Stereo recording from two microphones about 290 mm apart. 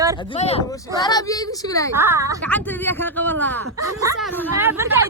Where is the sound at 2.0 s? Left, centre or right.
Centre.